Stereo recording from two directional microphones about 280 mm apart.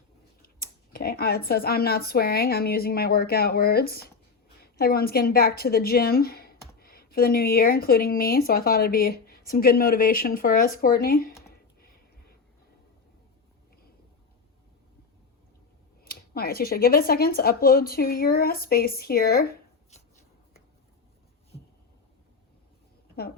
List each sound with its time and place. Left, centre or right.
0.9 s a woman's voice: left
16.0 s speech: left